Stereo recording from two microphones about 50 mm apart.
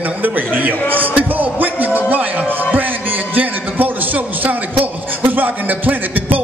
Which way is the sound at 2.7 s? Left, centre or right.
Right.